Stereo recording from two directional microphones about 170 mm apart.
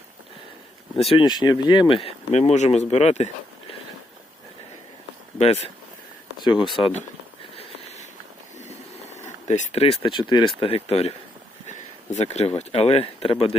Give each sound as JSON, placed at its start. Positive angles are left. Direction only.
{"t": 1.1, "sound": "speech", "side_deg": 25}
{"t": 5.4, "sound": "speech", "side_deg": 40}
{"t": 6.4, "sound": "speech", "side_deg": 25}
{"t": 7.5, "sound": "a sound", "side_deg": 35}
{"t": 9.1, "sound": "speech", "side_deg": 40}